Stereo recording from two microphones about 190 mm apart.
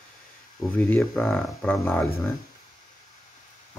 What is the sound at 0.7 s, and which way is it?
Speech, 10° left (ahead or behind).